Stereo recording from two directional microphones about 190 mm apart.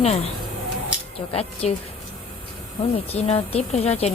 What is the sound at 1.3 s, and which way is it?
Speech, 30° left (ahead or behind).